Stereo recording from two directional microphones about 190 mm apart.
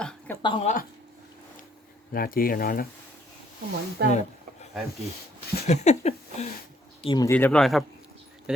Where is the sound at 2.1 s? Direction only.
50° left (ahead or behind).